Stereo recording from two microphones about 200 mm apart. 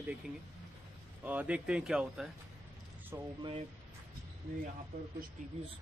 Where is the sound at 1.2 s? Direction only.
5° right (ahead or behind).